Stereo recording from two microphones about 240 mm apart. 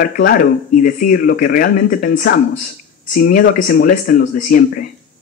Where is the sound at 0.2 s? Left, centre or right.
Left.